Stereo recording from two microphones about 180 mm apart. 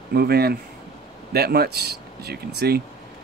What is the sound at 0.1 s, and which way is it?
Speech, 60° right (ahead or behind).